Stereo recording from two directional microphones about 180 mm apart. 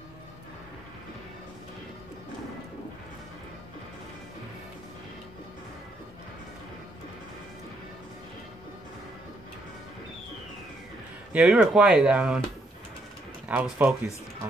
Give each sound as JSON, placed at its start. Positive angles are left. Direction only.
{"t": 11.3, "sound": "speech", "side_deg": -5}
{"t": 13.5, "sound": "speech", "side_deg": -10}